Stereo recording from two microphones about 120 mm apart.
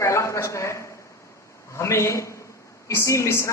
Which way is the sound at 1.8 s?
25° left (ahead or behind).